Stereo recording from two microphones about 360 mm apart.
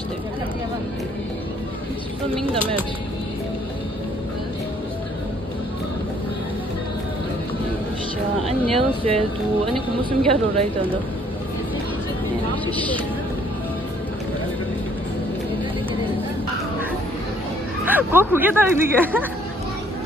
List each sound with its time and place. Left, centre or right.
2.4 s a woman's voice: centre
8.5 s a woman's voice: centre
17.8 s speech: centre